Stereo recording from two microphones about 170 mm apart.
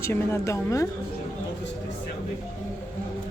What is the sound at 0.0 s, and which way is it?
Speech, 15° left (ahead or behind).